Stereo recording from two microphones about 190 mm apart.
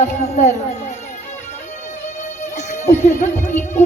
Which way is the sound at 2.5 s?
35° left (ahead or behind).